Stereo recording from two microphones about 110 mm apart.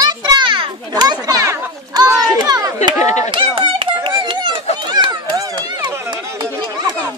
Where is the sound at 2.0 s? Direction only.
35° right (ahead or behind).